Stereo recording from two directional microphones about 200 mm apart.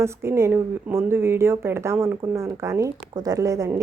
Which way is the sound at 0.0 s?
15° right (ahead or behind).